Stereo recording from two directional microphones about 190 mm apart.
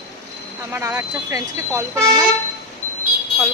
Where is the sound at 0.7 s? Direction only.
15° right (ahead or behind).